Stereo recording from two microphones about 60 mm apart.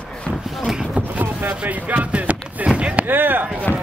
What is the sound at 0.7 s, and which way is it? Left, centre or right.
Speech, centre.